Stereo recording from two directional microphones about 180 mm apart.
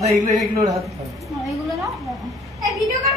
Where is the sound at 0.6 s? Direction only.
35° right (ahead or behind).